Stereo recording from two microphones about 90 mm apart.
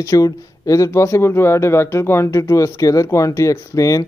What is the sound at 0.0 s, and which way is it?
Speech, 40° left (ahead or behind).